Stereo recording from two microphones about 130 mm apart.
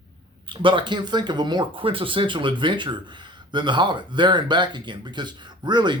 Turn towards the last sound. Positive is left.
turn(degrees=-35)  # may be behind; listen again after turning